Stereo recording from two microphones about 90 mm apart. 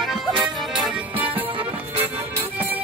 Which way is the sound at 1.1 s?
20° right (ahead or behind).